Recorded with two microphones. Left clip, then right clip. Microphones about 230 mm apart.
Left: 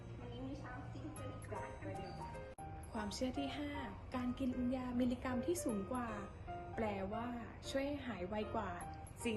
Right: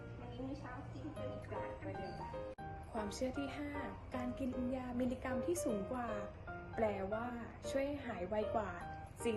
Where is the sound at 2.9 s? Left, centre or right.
Left.